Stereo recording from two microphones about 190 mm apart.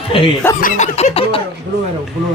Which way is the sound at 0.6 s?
40° left (ahead or behind).